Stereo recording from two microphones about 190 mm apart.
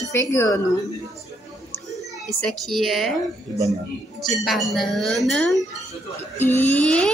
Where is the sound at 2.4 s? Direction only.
Centre (ahead or behind).